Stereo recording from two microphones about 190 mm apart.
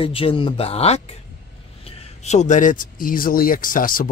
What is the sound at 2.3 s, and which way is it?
Speech, 40° left (ahead or behind).